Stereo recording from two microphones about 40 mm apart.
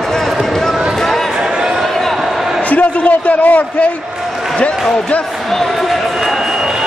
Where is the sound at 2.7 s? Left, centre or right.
Left.